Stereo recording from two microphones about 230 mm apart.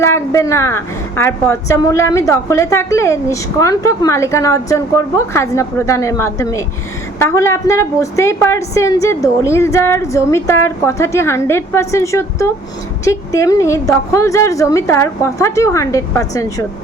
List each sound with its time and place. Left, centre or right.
0.0 s a woman's voice: centre